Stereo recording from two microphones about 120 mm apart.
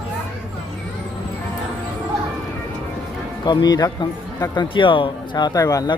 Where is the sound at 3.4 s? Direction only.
35° left (ahead or behind).